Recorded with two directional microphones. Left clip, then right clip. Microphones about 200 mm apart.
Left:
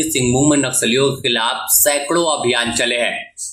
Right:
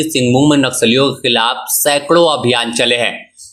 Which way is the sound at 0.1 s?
30° right (ahead or behind).